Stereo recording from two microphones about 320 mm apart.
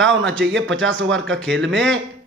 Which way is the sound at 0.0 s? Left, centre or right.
Right.